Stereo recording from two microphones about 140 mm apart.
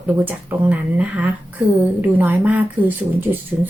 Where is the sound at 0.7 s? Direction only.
10° right (ahead or behind).